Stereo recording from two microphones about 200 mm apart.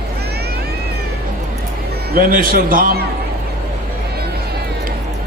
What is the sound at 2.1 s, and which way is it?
Speech, 45° right (ahead or behind).